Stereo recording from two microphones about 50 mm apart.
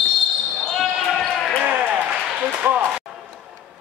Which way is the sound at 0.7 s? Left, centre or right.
Centre.